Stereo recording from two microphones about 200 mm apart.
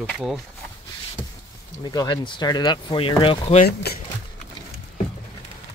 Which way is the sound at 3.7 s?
50° left (ahead or behind).